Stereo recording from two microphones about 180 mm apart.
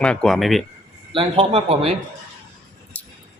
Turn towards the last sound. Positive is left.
turn(degrees=10)  # may be behind; listen again after turning